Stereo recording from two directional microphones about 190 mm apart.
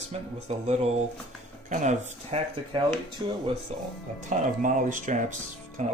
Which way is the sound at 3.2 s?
25° right (ahead or behind).